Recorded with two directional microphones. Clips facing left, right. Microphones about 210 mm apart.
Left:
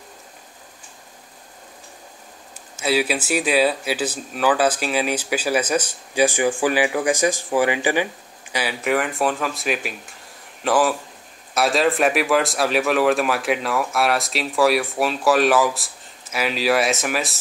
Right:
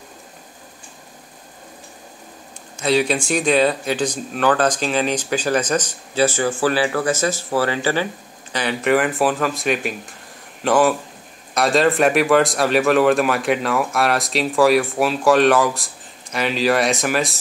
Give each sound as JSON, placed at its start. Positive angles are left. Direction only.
{"t": 2.7, "sound": "a man's voice", "side_deg": 5}